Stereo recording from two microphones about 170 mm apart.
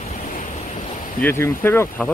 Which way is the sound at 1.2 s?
15° left (ahead or behind).